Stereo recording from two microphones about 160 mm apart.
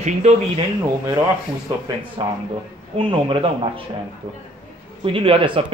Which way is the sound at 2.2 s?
30° right (ahead or behind).